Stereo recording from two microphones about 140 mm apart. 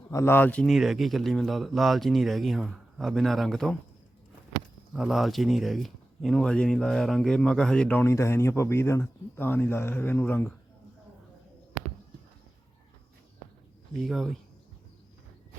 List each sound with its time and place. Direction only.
0.1 s speech: 20° left (ahead or behind)
0.6 s speech: centre (ahead or behind)
4.9 s speech: centre (ahead or behind); by 10.5 s 15° left (ahead or behind)
14.0 s speech: centre (ahead or behind)